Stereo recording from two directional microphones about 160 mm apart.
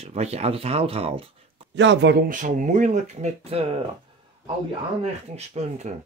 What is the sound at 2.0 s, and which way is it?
Speech, 70° right (ahead or behind).